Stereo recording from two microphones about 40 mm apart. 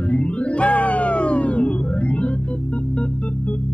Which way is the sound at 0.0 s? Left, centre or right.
Left.